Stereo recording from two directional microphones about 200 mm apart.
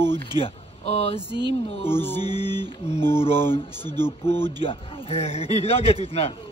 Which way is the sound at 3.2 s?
30° left (ahead or behind).